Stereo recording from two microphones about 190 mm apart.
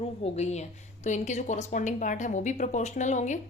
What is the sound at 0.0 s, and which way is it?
A woman's voice, 35° left (ahead or behind).